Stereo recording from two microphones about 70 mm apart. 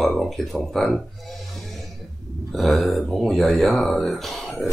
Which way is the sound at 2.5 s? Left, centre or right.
Centre.